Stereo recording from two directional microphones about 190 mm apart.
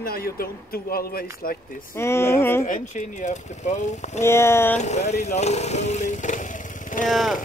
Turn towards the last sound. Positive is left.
turn(degrees=0)  # may be behind; listen again after turning